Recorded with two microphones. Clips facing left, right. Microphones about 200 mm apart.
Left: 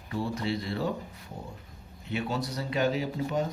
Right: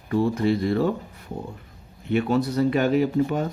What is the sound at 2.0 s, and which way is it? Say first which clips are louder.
Speech: right 10 dB; 55° right (ahead or behind).